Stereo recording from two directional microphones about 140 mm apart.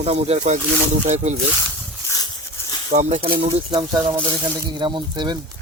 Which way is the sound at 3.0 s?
45° right (ahead or behind).